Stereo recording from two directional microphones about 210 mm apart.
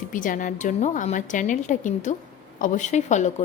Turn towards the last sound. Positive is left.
turn(degrees=35)  # may be behind; listen again after turning